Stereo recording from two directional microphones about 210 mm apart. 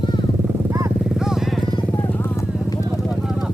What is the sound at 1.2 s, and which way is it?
Vehicle, centre (ahead or behind).